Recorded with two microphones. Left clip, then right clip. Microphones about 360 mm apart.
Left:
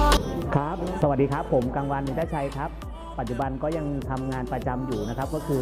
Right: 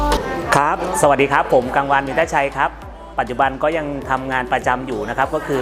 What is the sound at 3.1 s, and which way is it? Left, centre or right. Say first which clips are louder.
Speech: right 12 dB; centre.